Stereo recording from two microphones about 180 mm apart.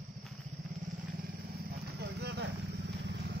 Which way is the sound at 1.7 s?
65° right (ahead or behind).